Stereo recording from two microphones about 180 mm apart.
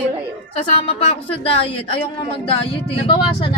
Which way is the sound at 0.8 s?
35° left (ahead or behind).